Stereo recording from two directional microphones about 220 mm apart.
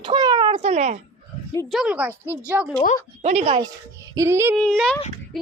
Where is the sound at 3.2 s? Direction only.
30° right (ahead or behind).